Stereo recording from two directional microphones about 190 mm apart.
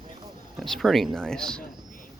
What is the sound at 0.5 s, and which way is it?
Speech, centre (ahead or behind).